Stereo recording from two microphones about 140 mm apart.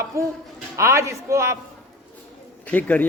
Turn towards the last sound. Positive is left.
turn(degrees=10)  # may be behind; listen again after turning